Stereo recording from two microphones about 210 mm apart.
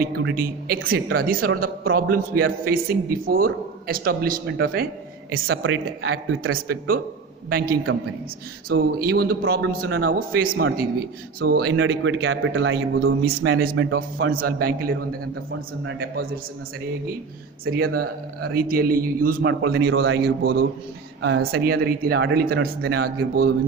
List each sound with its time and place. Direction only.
0.1 s a man's voice: 50° right (ahead or behind)
5.3 s speech: 65° right (ahead or behind)
6.7 s a man's voice: 45° right (ahead or behind)
7.9 s a man's voice: 70° right (ahead or behind)
8.7 s a man's voice: 45° right (ahead or behind)
10.5 s a man's voice: 70° right (ahead or behind)
11.3 s a man's voice: 45° right (ahead or behind)
15.8 s speech: 60° right (ahead or behind)
17.7 s a man's voice: 45° right (ahead or behind)
17.9 s speech: 90° right
18.5 s a man's voice: 45° right (ahead or behind)